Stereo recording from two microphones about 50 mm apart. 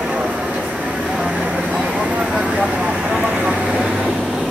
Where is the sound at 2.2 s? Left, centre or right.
Centre.